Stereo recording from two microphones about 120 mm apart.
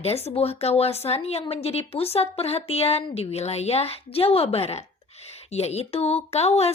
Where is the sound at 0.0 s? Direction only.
60° left (ahead or behind).